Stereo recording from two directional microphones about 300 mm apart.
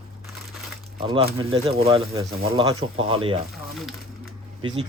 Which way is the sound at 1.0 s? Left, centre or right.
Centre.